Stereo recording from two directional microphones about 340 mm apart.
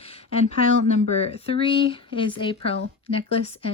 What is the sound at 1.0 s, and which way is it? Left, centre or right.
Speech, centre.